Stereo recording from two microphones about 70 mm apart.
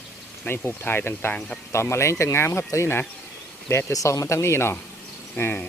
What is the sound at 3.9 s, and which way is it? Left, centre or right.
Speech, left.